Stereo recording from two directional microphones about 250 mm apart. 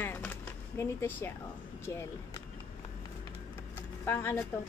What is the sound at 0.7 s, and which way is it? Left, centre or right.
A woman's voice, centre.